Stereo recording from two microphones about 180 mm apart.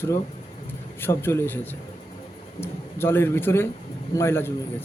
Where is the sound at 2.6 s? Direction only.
15° left (ahead or behind).